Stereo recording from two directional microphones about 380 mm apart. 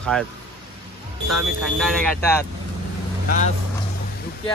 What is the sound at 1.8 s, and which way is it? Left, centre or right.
Speech, centre.